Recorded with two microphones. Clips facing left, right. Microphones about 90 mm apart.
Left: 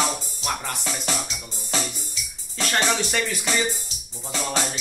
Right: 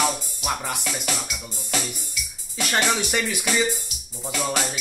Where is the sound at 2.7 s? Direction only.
10° right (ahead or behind).